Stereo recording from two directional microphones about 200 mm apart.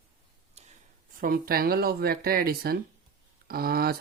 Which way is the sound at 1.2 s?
45° right (ahead or behind).